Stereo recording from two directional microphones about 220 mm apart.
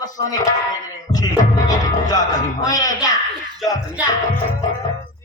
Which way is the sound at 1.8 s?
15° left (ahead or behind).